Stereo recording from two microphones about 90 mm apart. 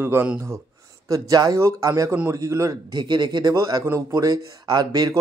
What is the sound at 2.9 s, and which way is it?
A man's voice, 55° right (ahead or behind).